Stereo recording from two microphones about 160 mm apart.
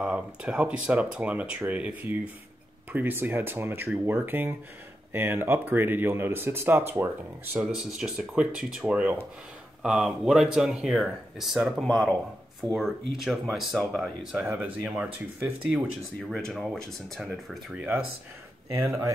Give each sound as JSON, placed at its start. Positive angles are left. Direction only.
{"t": 0.0, "sound": "speech", "side_deg": -5}
{"t": 14.4, "sound": "speech", "side_deg": -10}